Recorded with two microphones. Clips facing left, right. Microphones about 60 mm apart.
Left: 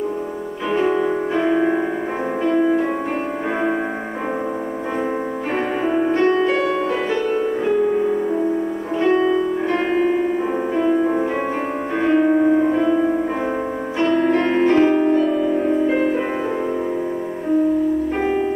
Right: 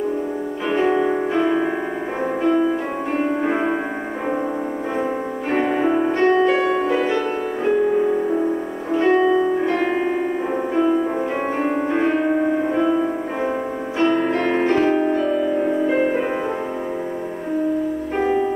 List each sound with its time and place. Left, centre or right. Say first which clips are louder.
0.7 s music: even; centre
1.4 s music: left 3 dB; centre
3.4 s music: right 1 dB; centre
5.6 s music: right 2 dB; centre
9.0 s music: right 1 dB; centre
11.9 s music: left 6 dB; centre
14.0 s music: left 1 dB; centre
14.3 s music: left 3 dB; centre
15.0 s music: left 2 dB; centre